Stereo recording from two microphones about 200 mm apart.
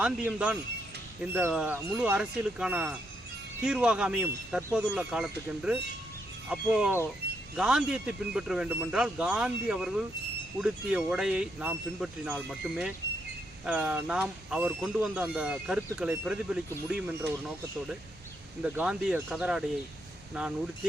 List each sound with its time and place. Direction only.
0.0 s speech: 5° right (ahead or behind)
18.6 s speech: 5° right (ahead or behind)